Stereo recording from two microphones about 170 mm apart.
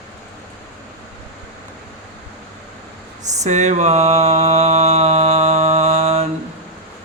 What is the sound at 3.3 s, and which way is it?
Mantra, 45° right (ahead or behind).